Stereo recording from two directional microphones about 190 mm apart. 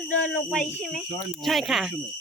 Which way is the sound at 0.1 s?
5° left (ahead or behind).